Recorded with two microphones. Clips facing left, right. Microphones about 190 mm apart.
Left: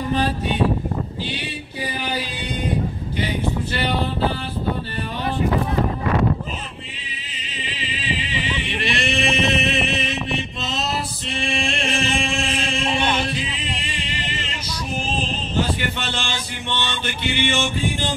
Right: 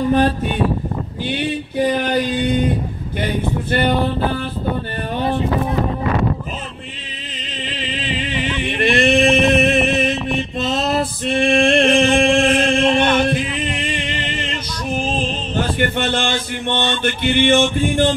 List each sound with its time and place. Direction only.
0.1 s music: 50° right (ahead or behind)
1.3 s a sound: 55° right (ahead or behind)
8.6 s chant: 50° right (ahead or behind)
10.6 s male singing: 50° right (ahead or behind)
12.9 s chant: 10° left (ahead or behind)
13.3 s music: 55° right (ahead or behind)
13.7 s a sound: 55° right (ahead or behind)
15.5 s a sound: 55° right (ahead or behind)
17.5 s music: 55° right (ahead or behind)